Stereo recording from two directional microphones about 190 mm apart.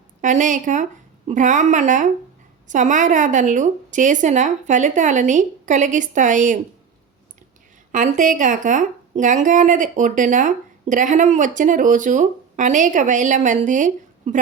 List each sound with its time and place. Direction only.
0.2 s speech: 40° right (ahead or behind)
7.9 s speech: 40° right (ahead or behind)